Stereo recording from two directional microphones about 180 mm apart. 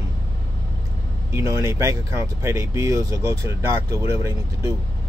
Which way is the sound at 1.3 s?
15° right (ahead or behind).